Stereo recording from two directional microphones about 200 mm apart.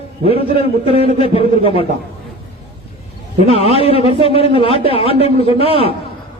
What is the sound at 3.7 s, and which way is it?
Speech, 30° left (ahead or behind).